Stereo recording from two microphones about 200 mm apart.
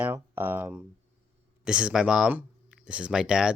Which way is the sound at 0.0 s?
10° right (ahead or behind).